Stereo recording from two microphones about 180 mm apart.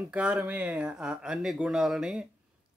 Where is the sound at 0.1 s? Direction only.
5° right (ahead or behind).